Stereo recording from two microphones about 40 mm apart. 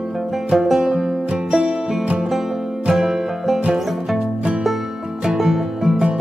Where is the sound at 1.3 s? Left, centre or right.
Right.